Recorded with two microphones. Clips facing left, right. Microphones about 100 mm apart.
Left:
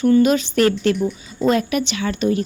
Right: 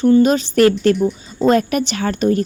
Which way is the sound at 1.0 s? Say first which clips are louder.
Right 4 dB; 25° right (ahead or behind).